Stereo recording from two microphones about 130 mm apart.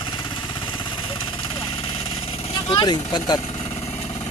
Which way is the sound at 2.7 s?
35° left (ahead or behind).